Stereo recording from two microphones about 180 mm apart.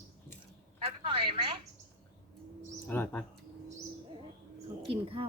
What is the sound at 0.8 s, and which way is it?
Telephone, 30° right (ahead or behind).